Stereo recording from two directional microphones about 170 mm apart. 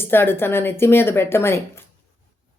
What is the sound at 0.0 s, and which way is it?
Speech, 15° left (ahead or behind).